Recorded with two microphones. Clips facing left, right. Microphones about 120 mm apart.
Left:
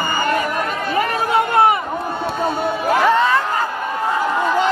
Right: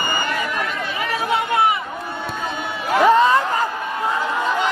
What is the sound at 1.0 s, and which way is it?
Chatter, 50° left (ahead or behind).